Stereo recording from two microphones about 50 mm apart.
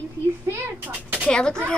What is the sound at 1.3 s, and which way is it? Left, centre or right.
Speech, centre.